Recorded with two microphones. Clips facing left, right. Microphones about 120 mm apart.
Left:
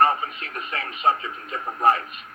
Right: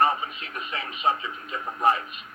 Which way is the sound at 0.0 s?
40° left (ahead or behind).